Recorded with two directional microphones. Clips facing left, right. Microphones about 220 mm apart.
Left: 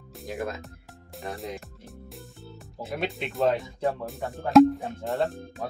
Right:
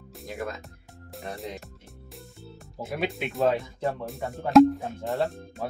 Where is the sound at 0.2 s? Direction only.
Centre (ahead or behind).